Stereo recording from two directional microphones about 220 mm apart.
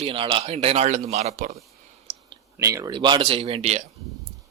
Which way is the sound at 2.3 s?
15° right (ahead or behind).